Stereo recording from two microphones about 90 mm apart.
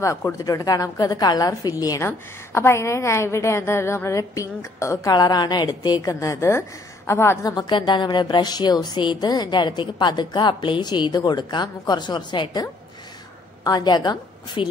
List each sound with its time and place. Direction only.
0.0 s a woman's voice: 35° left (ahead or behind)
2.0 s a woman's voice: 30° left (ahead or behind)
5.1 s a woman's voice: 50° left (ahead or behind); by 7.5 s 30° left (ahead or behind)
7.5 s speech: 55° left (ahead or behind)
13.7 s a woman's voice: 50° left (ahead or behind)